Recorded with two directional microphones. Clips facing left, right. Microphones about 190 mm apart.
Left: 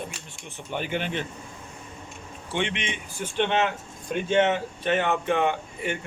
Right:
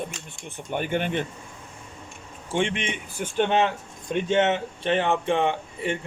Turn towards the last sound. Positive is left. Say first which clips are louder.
# right 1 dB
turn(degrees=-30)  # may be behind; listen again after turning